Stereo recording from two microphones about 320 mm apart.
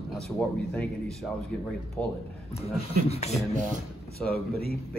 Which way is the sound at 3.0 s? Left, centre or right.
Centre.